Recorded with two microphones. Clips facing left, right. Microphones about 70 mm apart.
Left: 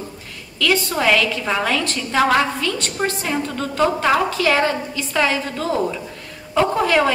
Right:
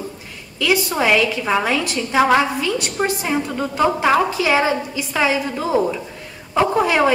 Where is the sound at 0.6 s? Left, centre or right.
Centre.